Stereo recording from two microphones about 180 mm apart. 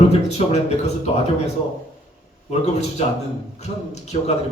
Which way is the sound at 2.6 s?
40° left (ahead or behind).